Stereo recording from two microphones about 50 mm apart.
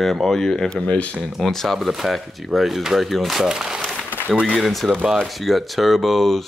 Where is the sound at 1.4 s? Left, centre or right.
Centre.